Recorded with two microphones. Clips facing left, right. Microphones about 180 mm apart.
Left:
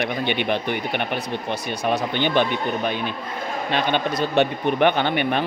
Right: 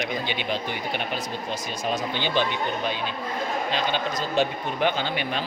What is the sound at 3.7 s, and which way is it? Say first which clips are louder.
Speech: left 8 dB; 60° left (ahead or behind).